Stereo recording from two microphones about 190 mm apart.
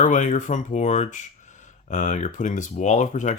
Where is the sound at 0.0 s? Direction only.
40° left (ahead or behind).